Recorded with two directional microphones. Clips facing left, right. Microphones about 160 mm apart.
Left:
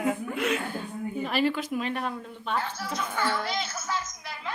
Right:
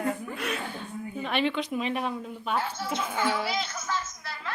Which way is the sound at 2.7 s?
25° right (ahead or behind).